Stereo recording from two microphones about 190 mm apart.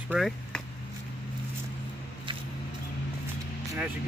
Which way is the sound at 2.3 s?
25° right (ahead or behind).